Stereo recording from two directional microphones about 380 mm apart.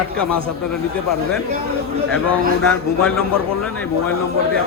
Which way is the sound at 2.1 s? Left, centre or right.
Centre.